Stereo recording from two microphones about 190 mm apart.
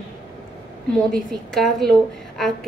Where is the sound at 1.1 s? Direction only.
Centre (ahead or behind).